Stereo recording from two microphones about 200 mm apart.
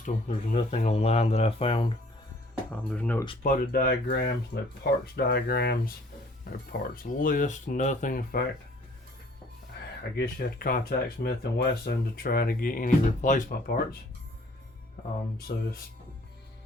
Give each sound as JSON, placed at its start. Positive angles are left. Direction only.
{"t": 0.0, "sound": "speech", "side_deg": 35}
{"t": 2.6, "sound": "speech", "side_deg": 10}
{"t": 3.4, "sound": "speech", "side_deg": 45}
{"t": 10.2, "sound": "speech", "side_deg": 50}
{"t": 15.5, "sound": "speech", "side_deg": 40}